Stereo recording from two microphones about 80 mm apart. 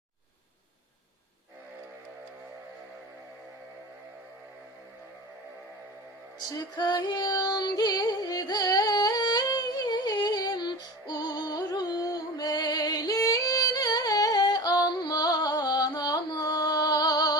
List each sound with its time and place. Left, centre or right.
6.5 s female singing: left